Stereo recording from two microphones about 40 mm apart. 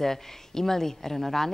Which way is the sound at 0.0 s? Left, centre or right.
Centre.